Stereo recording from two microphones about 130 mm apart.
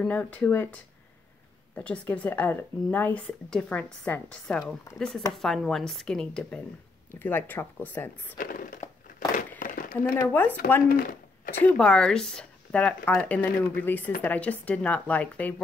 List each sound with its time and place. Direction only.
0.0 s speech: 10° left (ahead or behind)
1.8 s speech: 10° left (ahead or behind)
7.1 s speech: 15° left (ahead or behind)
8.4 s a sound: 90° left
10.1 s speech: 15° left (ahead or behind)
10.9 s a sound: 90° left
11.6 s speech: 5° left (ahead or behind)